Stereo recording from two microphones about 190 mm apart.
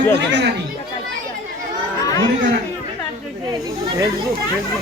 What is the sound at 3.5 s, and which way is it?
Speech, 20° right (ahead or behind).